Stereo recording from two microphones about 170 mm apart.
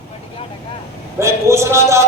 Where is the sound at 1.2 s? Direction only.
15° right (ahead or behind).